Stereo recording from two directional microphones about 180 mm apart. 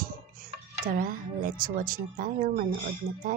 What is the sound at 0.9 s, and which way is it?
Speech, 50° right (ahead or behind).